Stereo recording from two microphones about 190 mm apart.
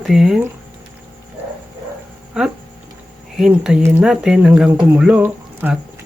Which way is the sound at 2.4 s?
5° right (ahead or behind).